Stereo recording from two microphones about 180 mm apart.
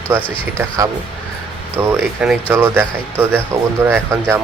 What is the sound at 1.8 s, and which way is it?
Speech, 10° right (ahead or behind).